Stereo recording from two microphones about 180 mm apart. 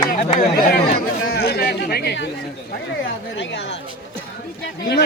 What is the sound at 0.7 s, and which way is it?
Speech, 65° left (ahead or behind).